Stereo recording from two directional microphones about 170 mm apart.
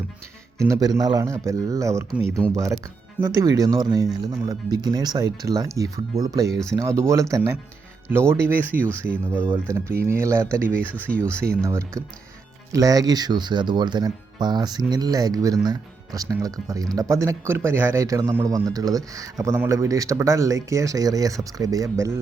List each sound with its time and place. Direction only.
0.7 s speech: 20° right (ahead or behind)
11.1 s speech: 5° left (ahead or behind)
11.6 s speech: 15° right (ahead or behind)